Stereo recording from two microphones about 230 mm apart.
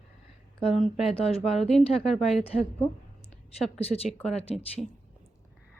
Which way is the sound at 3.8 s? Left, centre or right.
Left.